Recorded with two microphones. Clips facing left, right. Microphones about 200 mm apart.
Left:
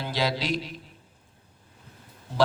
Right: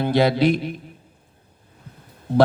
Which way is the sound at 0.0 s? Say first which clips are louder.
Right 11 dB; 55° right (ahead or behind).